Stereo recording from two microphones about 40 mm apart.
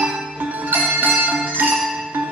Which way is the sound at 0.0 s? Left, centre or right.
Right.